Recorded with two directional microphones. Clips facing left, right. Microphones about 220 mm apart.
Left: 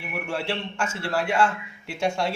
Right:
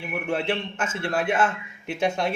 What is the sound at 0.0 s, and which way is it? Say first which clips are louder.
Speech: right 3 dB; 20° right (ahead or behind).